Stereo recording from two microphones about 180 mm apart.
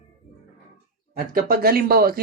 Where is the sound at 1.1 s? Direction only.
55° right (ahead or behind).